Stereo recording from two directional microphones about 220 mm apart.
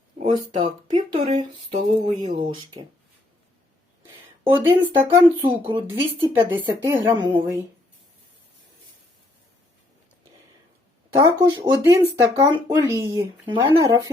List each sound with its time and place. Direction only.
0.2 s speech: 20° right (ahead or behind)
4.5 s speech: 10° right (ahead or behind)
11.1 s speech: 15° right (ahead or behind)